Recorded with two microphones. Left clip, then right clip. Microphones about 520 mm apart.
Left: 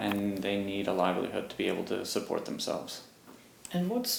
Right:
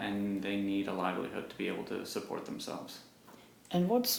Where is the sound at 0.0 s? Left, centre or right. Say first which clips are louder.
Left 4 dB; left.